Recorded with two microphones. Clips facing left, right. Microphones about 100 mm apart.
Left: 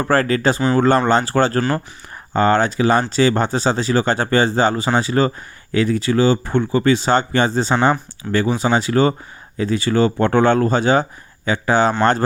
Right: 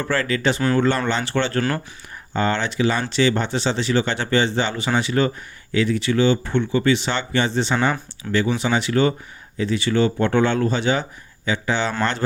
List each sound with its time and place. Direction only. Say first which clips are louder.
0.0 s speech: left 5 dB; 45° left (ahead or behind)